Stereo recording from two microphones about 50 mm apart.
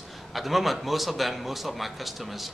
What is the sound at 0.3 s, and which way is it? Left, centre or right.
A man's voice, centre.